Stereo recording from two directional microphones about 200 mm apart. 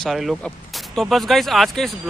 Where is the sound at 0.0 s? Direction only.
Centre (ahead or behind).